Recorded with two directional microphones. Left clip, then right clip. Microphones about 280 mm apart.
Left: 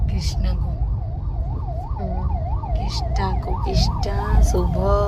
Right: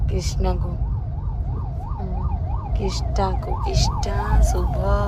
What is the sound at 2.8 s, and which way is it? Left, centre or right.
Speech, centre.